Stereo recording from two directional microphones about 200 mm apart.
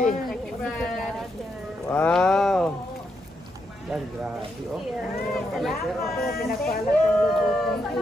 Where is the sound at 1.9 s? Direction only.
5° left (ahead or behind).